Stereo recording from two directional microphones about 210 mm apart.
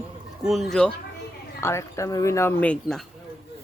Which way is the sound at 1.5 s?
15° left (ahead or behind).